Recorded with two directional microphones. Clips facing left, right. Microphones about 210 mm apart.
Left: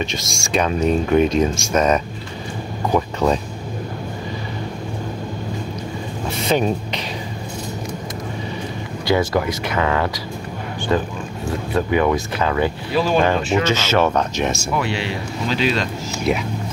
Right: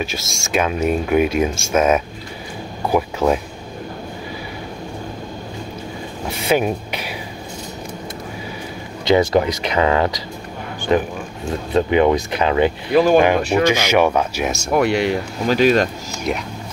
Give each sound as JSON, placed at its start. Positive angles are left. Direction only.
{"t": 0.0, "sound": "speech", "side_deg": -5}
{"t": 6.4, "sound": "speech", "side_deg": -10}
{"t": 9.0, "sound": "speech", "side_deg": -20}
{"t": 12.9, "sound": "speech", "side_deg": -50}
{"t": 13.2, "sound": "speech", "side_deg": -15}
{"t": 14.7, "sound": "speech", "side_deg": -50}